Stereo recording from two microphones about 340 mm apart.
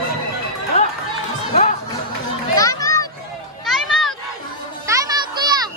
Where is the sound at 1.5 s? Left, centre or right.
Centre.